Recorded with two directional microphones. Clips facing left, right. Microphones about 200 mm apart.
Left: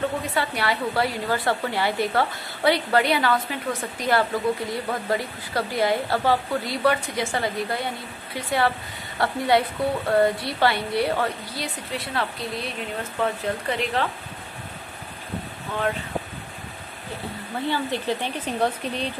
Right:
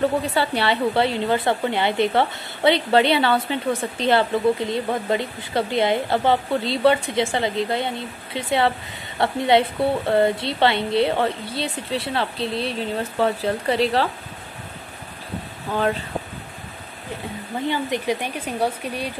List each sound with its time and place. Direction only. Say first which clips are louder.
0.3 s a woman's voice: right 4 dB; 30° right (ahead or behind)
17.6 s speech: right 2 dB; 20° right (ahead or behind)